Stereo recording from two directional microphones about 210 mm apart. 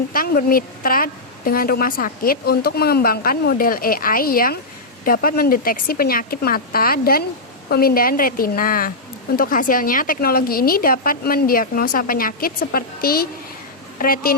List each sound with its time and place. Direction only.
0.1 s a woman's voice: 45° left (ahead or behind)